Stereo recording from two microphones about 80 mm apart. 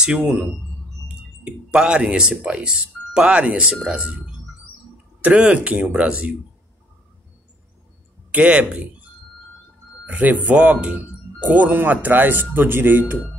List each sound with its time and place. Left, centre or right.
0.0 s speech: centre
5.2 s speech: centre
8.3 s speech: centre
10.0 s speech: centre